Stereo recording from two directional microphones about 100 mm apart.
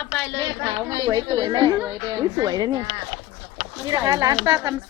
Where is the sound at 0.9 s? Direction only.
50° right (ahead or behind).